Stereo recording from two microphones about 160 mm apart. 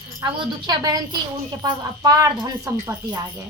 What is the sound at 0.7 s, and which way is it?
Speech, 25° right (ahead or behind).